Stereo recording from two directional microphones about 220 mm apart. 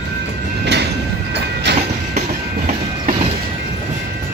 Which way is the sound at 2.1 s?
35° right (ahead or behind).